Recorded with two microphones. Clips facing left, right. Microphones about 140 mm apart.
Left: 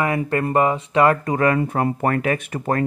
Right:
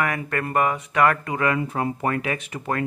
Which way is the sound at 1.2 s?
40° left (ahead or behind).